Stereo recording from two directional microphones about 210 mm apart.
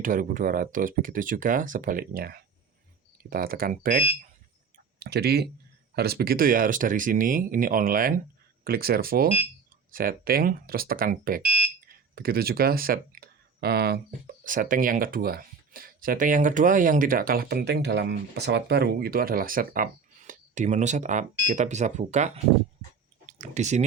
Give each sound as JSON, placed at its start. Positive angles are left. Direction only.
{"t": 0.0, "sound": "speech", "side_deg": -40}
{"t": 4.9, "sound": "speech", "side_deg": -50}
{"t": 23.4, "sound": "speech", "side_deg": -35}